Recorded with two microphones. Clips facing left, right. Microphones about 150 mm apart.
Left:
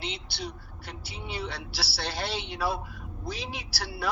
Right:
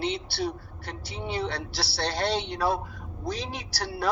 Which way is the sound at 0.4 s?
Centre (ahead or behind).